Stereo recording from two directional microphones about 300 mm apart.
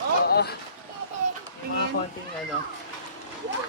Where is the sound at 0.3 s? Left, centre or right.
Left.